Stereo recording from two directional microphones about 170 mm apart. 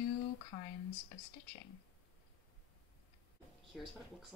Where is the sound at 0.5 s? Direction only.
25° left (ahead or behind).